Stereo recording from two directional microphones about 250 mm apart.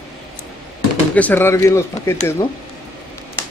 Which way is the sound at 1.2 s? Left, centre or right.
Centre.